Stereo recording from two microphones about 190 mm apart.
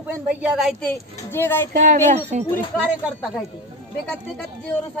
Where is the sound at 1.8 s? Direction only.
40° right (ahead or behind).